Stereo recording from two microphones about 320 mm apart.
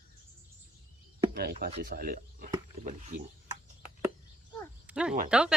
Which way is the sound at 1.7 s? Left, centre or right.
Right.